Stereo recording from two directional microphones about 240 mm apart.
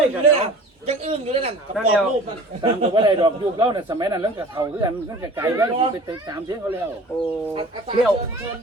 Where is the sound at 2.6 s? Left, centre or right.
Centre.